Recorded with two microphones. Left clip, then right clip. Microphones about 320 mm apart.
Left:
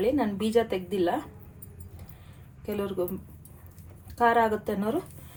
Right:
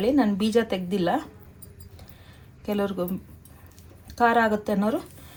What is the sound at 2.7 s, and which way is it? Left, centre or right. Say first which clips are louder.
Speech: right 4 dB; right.